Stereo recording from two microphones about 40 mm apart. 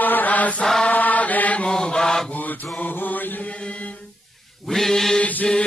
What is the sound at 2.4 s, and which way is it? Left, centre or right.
Mantra, left.